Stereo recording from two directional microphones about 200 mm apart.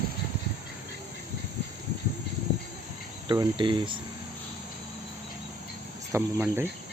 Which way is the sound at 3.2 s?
20° right (ahead or behind).